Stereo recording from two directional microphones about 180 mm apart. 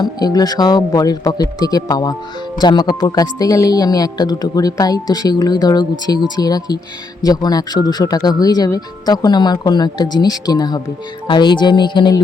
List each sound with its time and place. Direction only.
0.0 s speech: 20° left (ahead or behind)